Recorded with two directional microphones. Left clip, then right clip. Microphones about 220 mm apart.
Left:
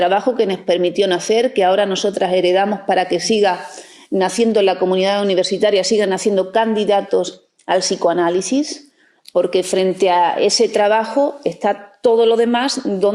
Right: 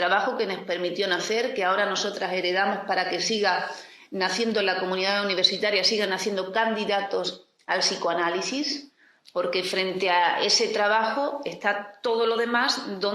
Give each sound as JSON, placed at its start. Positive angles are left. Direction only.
{"t": 0.0, "sound": "speech", "side_deg": 35}